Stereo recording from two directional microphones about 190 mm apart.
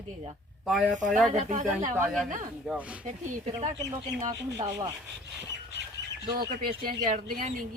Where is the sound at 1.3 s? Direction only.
40° right (ahead or behind).